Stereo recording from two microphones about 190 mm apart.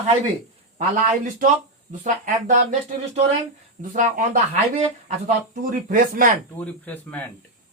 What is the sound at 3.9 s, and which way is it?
A man's voice, 40° right (ahead or behind).